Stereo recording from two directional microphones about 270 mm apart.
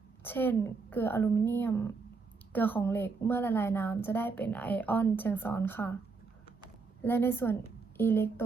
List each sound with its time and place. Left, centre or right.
0.3 s a woman's voice: centre
7.0 s a woman's voice: centre